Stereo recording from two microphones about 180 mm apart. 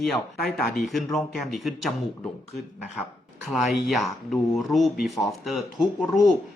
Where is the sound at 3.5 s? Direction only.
Centre (ahead or behind).